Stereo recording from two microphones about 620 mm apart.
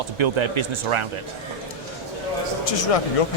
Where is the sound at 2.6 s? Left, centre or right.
Left.